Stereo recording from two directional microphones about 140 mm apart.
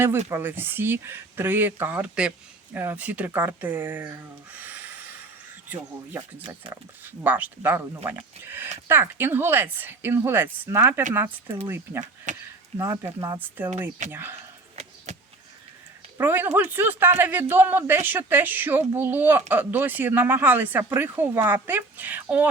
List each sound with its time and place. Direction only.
0.3 s speech: 15° right (ahead or behind)
7.0 s speech: 15° right (ahead or behind)
12.3 s speech: 60° right (ahead or behind)
12.7 s speech: 20° right (ahead or behind)
16.1 s speech: 15° right (ahead or behind)